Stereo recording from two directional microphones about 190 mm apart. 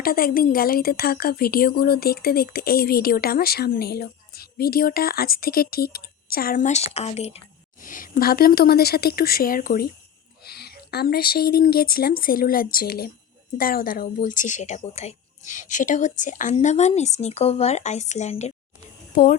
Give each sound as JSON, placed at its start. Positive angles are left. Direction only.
{"t": 0.0, "sound": "a woman's voice", "side_deg": 50}
{"t": 19.1, "sound": "speech", "side_deg": 45}